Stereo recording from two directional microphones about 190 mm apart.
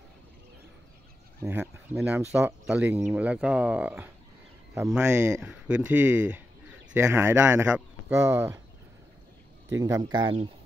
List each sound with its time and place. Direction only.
1.4 s speech: 5° right (ahead or behind)
9.8 s speech: 15° right (ahead or behind)